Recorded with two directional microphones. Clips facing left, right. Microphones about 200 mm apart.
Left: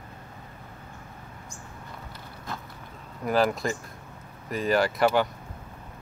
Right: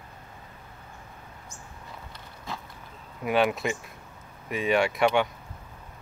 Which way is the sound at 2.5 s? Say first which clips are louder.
Even; centre (ahead or behind).